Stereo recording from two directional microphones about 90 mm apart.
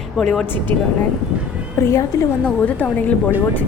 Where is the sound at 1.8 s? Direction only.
30° left (ahead or behind).